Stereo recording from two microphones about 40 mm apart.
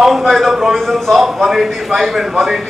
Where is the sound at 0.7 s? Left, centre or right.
Centre.